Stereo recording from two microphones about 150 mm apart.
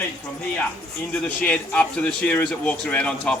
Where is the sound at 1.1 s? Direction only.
10° left (ahead or behind).